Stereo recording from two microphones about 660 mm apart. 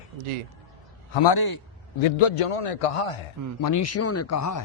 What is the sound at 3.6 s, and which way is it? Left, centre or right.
Speech, left.